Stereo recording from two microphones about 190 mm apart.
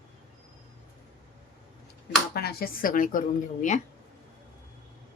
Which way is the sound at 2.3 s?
55° left (ahead or behind).